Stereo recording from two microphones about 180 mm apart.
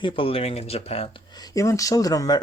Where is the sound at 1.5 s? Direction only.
20° left (ahead or behind).